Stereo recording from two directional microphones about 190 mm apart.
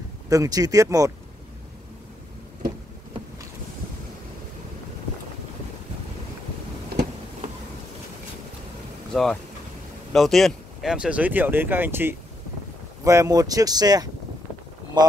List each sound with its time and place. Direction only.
0.3 s speech: 20° right (ahead or behind)
9.1 s speech: 5° left (ahead or behind); by 15.1 s 20° right (ahead or behind)